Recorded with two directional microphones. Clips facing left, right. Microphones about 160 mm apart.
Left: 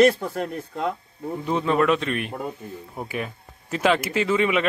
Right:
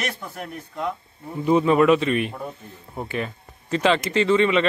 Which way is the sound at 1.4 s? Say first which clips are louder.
Right 5 dB; 5° right (ahead or behind).